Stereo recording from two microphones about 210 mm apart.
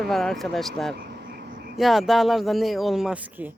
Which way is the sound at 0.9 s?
55° right (ahead or behind).